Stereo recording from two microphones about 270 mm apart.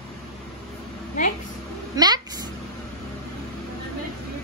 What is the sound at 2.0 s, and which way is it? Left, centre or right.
Vehicle, centre.